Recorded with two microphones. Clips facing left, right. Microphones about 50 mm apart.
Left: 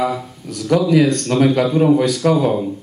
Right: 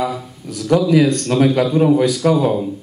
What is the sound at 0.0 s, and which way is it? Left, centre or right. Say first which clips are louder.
A man's voice: left 2 dB; centre.